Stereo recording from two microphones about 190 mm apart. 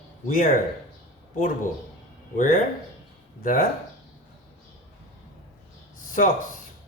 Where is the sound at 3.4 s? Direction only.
45° left (ahead or behind).